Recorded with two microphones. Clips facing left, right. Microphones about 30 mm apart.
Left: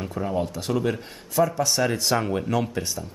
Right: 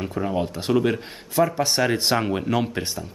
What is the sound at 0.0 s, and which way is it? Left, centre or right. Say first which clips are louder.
Speech: right 2 dB; centre.